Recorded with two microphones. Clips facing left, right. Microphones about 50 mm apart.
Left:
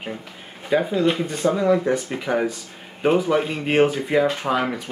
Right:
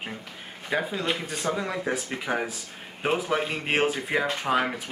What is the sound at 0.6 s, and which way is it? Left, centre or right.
Speech, centre.